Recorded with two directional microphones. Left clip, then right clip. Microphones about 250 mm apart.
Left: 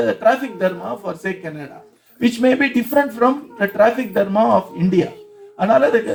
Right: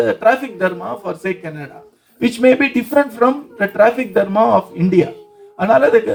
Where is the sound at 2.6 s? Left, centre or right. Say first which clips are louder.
Right 2 dB; centre.